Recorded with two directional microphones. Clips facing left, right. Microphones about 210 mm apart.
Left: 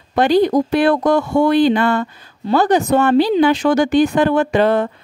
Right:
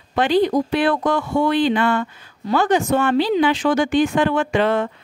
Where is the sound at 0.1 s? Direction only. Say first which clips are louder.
Left 3 dB; 40° left (ahead or behind).